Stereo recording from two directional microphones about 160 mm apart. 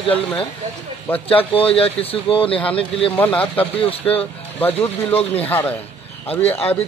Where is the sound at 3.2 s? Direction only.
10° left (ahead or behind).